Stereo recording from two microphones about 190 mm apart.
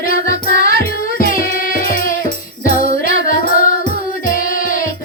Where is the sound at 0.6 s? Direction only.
45° left (ahead or behind).